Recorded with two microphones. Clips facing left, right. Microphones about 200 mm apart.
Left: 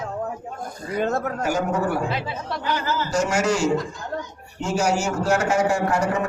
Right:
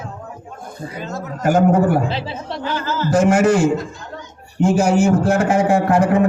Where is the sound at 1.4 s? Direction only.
55° right (ahead or behind).